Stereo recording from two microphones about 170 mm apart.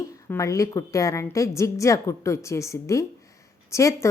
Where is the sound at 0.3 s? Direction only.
20° left (ahead or behind).